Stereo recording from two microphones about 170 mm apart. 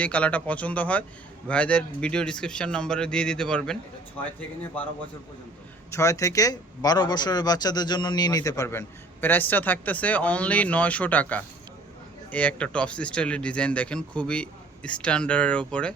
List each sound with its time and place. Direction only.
0.0 s speech: 10° left (ahead or behind)
5.9 s a man's voice: 20° left (ahead or behind)